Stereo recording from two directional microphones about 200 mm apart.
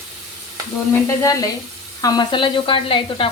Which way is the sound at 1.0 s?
15° left (ahead or behind).